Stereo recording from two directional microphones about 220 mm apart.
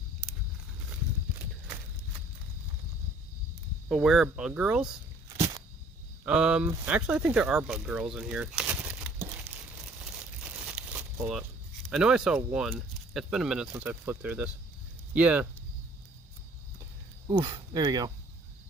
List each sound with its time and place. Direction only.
3.8 s speech: centre (ahead or behind)
6.2 s speech: 5° right (ahead or behind)
8.1 s a sound: 5° right (ahead or behind)
10.4 s crumpling: 5° right (ahead or behind)
11.9 s speech: 5° right (ahead or behind)
17.2 s speech: 20° right (ahead or behind)